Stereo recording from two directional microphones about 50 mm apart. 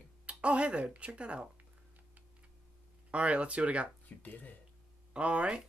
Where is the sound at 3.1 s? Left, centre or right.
Right.